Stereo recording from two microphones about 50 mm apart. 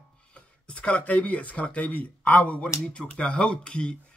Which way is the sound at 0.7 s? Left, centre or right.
Left.